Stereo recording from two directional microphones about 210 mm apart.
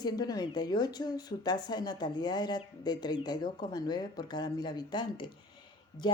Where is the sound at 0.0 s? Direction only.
20° left (ahead or behind).